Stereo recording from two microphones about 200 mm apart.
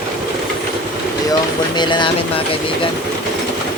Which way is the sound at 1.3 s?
20° left (ahead or behind).